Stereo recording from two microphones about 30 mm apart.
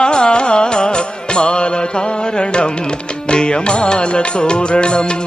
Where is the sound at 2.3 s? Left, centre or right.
Left.